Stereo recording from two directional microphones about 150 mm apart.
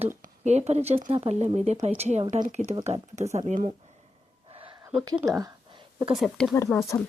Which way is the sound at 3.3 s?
60° right (ahead or behind).